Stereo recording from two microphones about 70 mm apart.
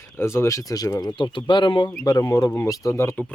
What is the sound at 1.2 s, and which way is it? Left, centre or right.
Speech, left.